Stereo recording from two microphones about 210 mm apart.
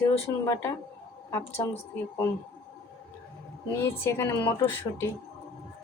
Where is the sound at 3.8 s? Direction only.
10° left (ahead or behind).